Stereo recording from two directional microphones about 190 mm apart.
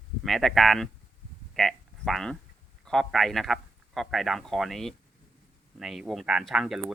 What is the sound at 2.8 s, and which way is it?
Speech, centre (ahead or behind).